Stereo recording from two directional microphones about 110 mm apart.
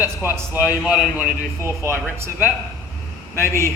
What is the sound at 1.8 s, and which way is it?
Speech, 25° right (ahead or behind).